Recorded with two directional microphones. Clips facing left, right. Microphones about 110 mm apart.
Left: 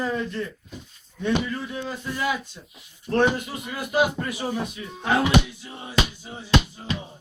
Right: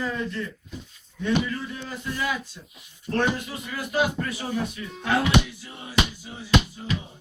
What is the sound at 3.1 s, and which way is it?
Speech, 25° left (ahead or behind).